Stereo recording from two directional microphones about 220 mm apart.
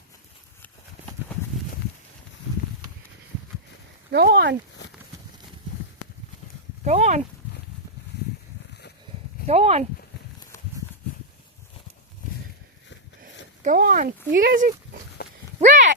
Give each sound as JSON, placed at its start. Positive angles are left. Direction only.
{"t": 4.1, "sound": "speech", "side_deg": -50}
{"t": 6.8, "sound": "speech", "side_deg": -30}
{"t": 9.5, "sound": "speech", "side_deg": -30}
{"t": 13.6, "sound": "speech", "side_deg": -40}
{"t": 15.2, "sound": "a sound", "side_deg": 45}
{"t": 15.6, "sound": "a sound", "side_deg": -35}